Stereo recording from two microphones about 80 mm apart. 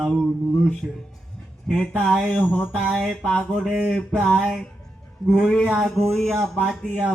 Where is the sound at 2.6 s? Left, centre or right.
Centre.